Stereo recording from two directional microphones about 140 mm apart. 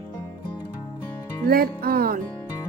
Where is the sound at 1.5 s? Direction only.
90° right.